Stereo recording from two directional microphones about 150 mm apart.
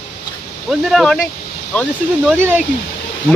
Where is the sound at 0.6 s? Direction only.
Centre (ahead or behind).